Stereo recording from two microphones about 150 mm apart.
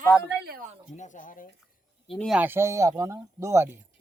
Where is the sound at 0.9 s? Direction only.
55° left (ahead or behind).